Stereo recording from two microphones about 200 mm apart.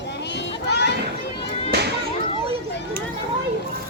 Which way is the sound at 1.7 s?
55° right (ahead or behind).